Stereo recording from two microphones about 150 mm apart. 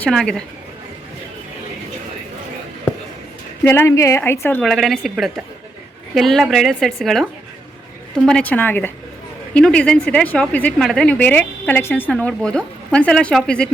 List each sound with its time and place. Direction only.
0.0 s a woman's voice: 5° left (ahead or behind)
3.6 s a woman's voice: 15° left (ahead or behind)
4.6 s a woman's voice: centre (ahead or behind)
8.3 s a woman's voice: 10° left (ahead or behind)